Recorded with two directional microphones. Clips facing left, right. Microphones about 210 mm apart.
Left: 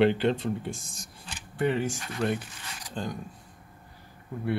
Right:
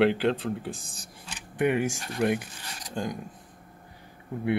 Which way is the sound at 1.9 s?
35° right (ahead or behind).